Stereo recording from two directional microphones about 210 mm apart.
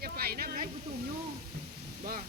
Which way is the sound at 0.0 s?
45° right (ahead or behind).